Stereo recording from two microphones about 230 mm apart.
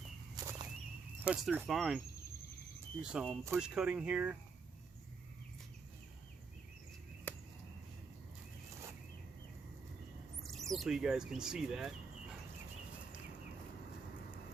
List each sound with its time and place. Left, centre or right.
0.4 s whip: centre
1.2 s speech: centre
3.0 s speech: centre
7.3 s a sound: centre
10.4 s speech: centre